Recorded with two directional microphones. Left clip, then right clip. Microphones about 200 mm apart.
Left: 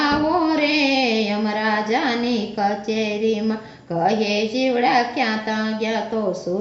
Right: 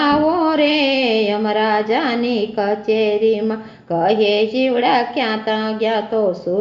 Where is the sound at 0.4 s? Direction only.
30° right (ahead or behind).